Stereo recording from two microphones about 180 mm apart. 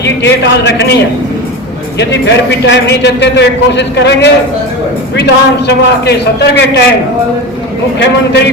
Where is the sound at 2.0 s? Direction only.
70° left (ahead or behind).